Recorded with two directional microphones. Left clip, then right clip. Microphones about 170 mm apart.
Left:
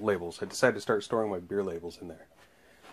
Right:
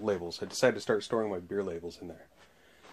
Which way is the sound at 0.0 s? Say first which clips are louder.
Left 2 dB; 15° left (ahead or behind).